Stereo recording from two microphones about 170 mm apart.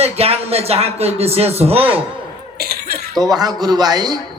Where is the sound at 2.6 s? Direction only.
60° right (ahead or behind).